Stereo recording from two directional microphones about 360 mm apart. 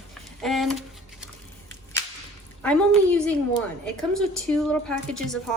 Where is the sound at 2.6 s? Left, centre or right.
Centre.